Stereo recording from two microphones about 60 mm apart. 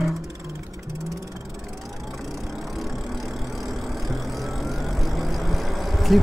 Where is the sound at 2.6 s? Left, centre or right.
Centre.